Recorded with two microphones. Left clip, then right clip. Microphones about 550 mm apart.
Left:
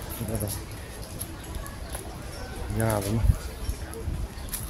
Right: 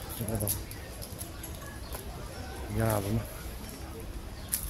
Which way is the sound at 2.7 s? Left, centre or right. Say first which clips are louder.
Left 3 dB; right.